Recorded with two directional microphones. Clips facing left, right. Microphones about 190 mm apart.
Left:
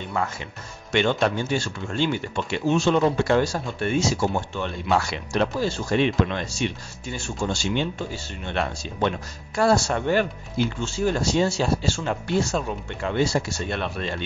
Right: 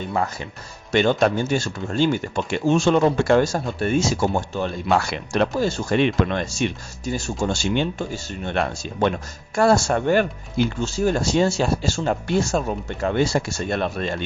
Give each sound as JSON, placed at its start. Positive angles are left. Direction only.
{"t": 0.1, "sound": "speech", "side_deg": -35}
{"t": 4.9, "sound": "speech", "side_deg": -55}